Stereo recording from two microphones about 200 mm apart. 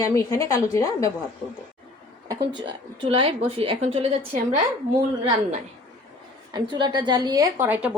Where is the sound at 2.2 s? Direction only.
25° right (ahead or behind).